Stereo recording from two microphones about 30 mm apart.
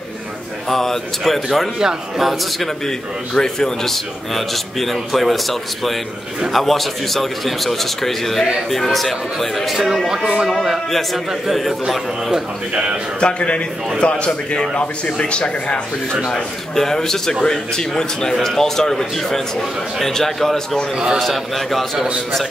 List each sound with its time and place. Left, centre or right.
0.7 s a man's voice: centre
3.3 s a man's voice: centre
10.0 s a man's voice: centre
13.2 s a man's voice: left
16.7 s a man's voice: centre
21.9 s a man's voice: right